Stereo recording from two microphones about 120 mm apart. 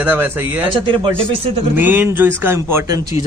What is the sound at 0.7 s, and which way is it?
Speech, 45° right (ahead or behind).